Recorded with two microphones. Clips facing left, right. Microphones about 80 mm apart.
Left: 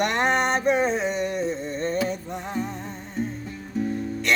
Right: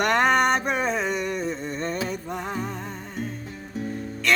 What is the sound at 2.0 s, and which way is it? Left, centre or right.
Music, right.